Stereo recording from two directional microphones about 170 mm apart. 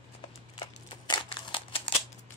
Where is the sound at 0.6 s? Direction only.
25° left (ahead or behind).